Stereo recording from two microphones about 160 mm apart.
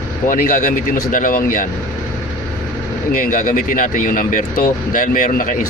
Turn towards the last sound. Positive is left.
turn(degrees=55)  # may be behind; listen again after turning